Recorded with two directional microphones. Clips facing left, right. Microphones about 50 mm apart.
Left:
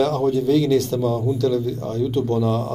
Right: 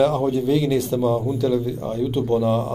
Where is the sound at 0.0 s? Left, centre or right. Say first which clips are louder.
Even; centre.